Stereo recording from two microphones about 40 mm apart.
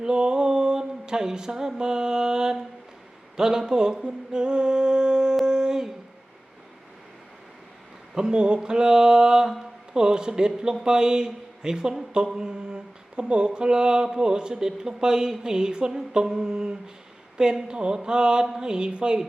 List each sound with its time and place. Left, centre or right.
0.0 s mantra: right
5.5 s a sound: centre
8.1 s speech: right
10.8 s mantra: centre